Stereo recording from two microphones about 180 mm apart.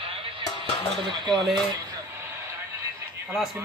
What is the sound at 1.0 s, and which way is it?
Speech, 25° right (ahead or behind).